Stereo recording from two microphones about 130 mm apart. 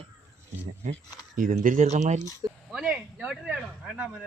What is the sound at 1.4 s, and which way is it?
Speech, 90° right.